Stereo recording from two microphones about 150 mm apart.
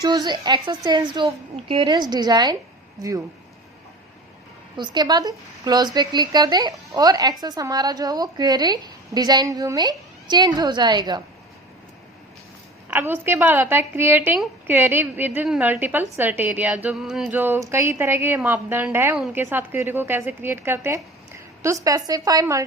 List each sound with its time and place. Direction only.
0.0 s speech: 30° right (ahead or behind)
4.8 s speech: 30° right (ahead or behind)
12.9 s a woman's voice: 15° right (ahead or behind)
17.4 s a woman's voice: 15° right (ahead or behind)